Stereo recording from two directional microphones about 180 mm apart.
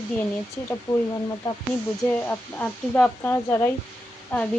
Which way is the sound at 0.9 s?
25° left (ahead or behind).